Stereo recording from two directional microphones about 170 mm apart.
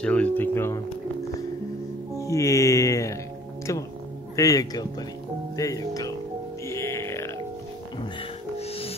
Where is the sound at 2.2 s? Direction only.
20° left (ahead or behind).